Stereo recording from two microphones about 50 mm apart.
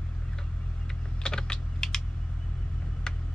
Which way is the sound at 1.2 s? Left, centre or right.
Centre.